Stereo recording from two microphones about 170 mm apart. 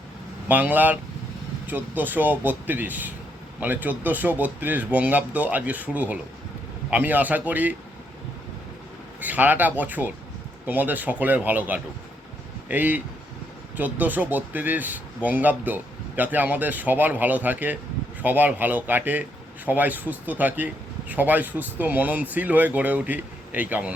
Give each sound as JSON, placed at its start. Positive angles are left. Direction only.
{"t": 0.4, "sound": "speech", "side_deg": -10}
{"t": 9.2, "sound": "speech", "side_deg": -10}